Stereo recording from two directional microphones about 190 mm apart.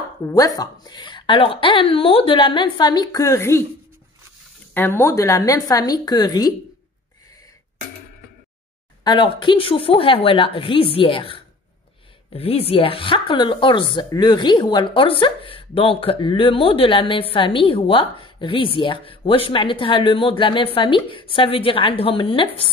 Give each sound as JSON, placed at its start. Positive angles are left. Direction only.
{"t": 0.3, "sound": "speech", "side_deg": 20}
{"t": 4.7, "sound": "a woman's voice", "side_deg": 10}
{"t": 9.0, "sound": "speech", "side_deg": 25}